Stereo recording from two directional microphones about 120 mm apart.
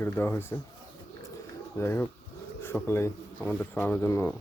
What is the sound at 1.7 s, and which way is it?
Speech, 20° left (ahead or behind).